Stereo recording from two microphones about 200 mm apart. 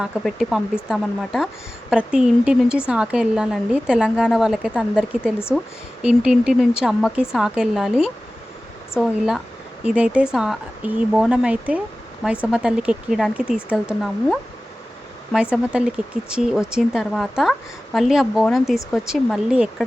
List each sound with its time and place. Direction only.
0.0 s a woman's voice: centre (ahead or behind)